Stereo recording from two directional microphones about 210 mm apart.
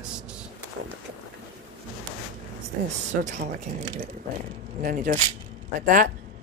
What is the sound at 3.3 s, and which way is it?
Speech, 35° right (ahead or behind).